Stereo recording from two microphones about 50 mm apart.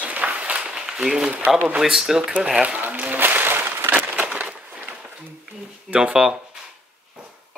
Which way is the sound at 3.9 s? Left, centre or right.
Right.